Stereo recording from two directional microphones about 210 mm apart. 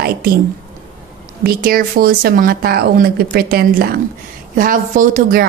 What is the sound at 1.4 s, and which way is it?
A woman's voice, 45° right (ahead or behind).